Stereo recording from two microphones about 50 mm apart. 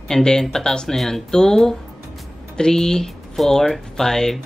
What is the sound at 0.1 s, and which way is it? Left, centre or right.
Speech, centre.